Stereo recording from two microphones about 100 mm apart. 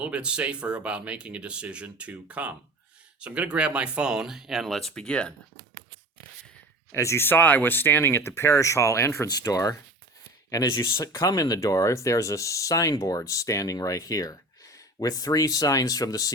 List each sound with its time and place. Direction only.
0.0 s speech: 10° right (ahead or behind); by 5.3 s 10° left (ahead or behind)
6.9 s speech: 30° left (ahead or behind)